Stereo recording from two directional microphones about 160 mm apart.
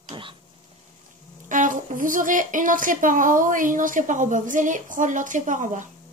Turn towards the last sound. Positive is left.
turn(degrees=-55)  # may be behind; listen again after turning